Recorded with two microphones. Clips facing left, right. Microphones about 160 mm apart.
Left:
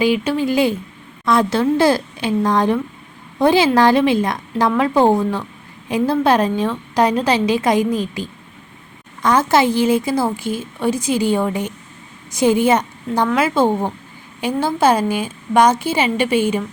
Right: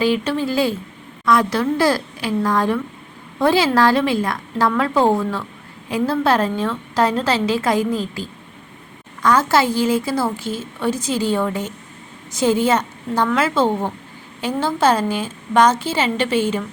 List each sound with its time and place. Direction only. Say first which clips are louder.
0.0 s a woman's voice: left 2 dB; 15° left (ahead or behind)
9.2 s a woman's voice: left 2 dB; 20° left (ahead or behind)